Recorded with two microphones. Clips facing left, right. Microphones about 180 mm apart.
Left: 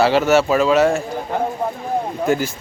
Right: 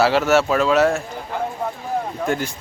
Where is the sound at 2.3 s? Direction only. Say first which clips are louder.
Left 5 dB; 5° left (ahead or behind).